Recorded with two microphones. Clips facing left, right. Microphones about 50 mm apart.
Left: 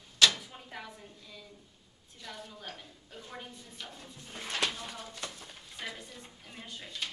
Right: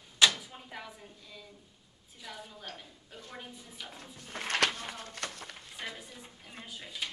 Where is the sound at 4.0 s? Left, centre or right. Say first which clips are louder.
Right 1 dB; centre.